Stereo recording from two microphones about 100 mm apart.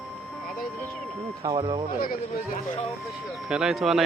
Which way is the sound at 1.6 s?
60° right (ahead or behind).